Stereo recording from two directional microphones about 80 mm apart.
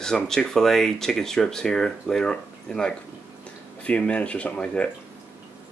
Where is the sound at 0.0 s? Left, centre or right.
Centre.